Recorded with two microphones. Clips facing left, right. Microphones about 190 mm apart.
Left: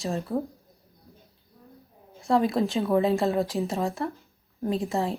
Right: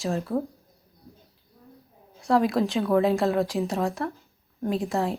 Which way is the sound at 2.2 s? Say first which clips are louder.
Right 1 dB; centre (ahead or behind).